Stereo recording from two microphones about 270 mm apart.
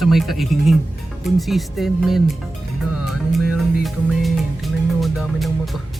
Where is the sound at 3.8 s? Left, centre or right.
Centre.